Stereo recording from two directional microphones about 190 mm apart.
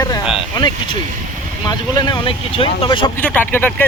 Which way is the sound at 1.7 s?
20° left (ahead or behind).